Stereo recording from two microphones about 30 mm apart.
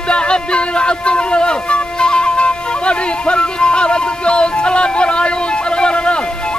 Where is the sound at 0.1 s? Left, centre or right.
Left.